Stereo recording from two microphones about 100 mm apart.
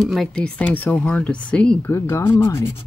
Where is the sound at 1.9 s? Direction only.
25° left (ahead or behind).